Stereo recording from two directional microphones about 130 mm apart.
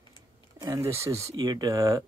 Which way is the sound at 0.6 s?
25° right (ahead or behind).